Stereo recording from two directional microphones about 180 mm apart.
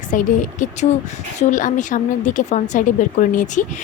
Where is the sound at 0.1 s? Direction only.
45° left (ahead or behind).